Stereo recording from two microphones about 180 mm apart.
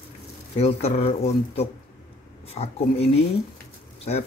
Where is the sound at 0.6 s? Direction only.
35° left (ahead or behind).